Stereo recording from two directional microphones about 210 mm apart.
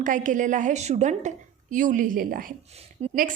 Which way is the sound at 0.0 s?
40° right (ahead or behind).